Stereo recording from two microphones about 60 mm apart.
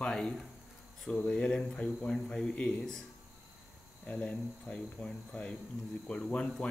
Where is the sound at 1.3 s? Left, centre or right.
Centre.